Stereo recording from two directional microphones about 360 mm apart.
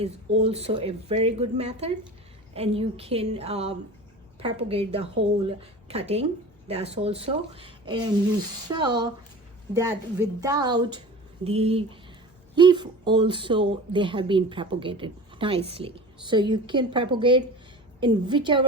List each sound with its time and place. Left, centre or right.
0.0 s speech: centre